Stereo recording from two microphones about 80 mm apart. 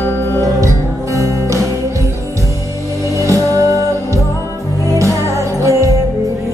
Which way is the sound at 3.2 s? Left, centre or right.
Right.